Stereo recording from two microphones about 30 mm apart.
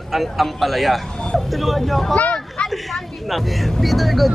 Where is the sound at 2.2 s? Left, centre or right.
Left.